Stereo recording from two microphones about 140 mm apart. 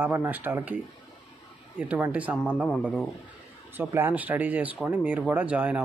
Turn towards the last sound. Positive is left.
turn(degrees=-10)  # may be behind; listen again after turning